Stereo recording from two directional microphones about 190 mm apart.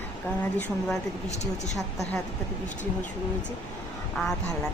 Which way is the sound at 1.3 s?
35° left (ahead or behind).